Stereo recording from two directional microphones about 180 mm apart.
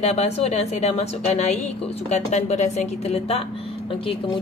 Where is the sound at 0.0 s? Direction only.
35° left (ahead or behind).